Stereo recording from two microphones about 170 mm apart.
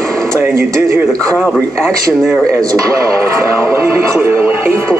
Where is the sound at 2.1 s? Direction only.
5° right (ahead or behind).